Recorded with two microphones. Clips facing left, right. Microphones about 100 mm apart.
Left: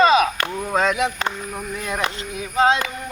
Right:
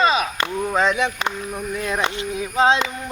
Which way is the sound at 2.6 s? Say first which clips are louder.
Even; 25° right (ahead or behind).